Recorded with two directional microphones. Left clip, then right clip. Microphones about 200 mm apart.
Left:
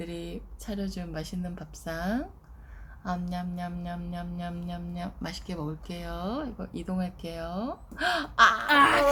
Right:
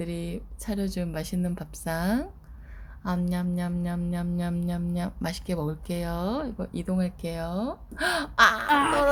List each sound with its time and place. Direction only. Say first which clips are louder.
0.0 s speech: right 3 dB; 35° right (ahead or behind)
8.6 s speech: left 2 dB; 10° left (ahead or behind)